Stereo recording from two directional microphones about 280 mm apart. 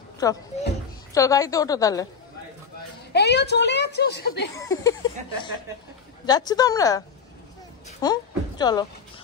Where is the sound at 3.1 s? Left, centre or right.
Left.